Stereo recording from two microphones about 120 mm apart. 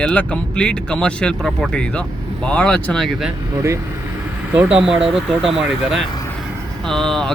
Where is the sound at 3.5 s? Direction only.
25° right (ahead or behind).